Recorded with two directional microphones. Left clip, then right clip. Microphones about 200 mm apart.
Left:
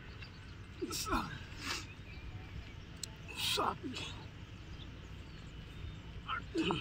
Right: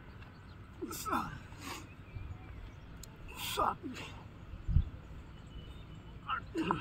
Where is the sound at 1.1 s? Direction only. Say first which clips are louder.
Right 5 dB; 5° right (ahead or behind).